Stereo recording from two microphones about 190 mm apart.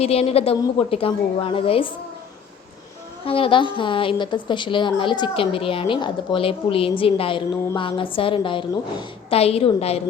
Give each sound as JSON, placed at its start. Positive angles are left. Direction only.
{"t": 0.0, "sound": "a woman's voice", "side_deg": 30}
{"t": 3.2, "sound": "a woman's voice", "side_deg": 30}